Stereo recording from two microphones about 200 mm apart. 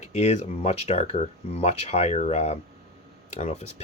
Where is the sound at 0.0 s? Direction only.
35° left (ahead or behind).